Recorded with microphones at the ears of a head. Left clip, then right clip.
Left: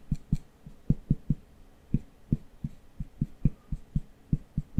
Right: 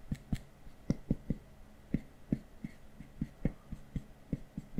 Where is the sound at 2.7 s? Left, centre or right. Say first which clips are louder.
Left 5 dB; left.